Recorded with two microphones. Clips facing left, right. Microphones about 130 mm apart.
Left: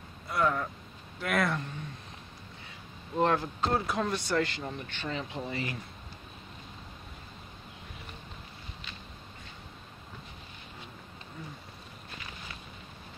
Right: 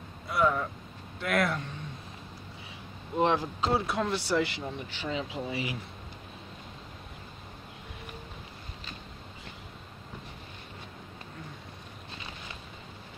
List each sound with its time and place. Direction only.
0.3 s speech: centre (ahead or behind)
3.2 s speech: 10° right (ahead or behind)